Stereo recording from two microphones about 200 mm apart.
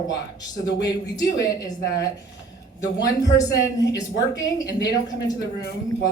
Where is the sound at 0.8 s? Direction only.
20° left (ahead or behind).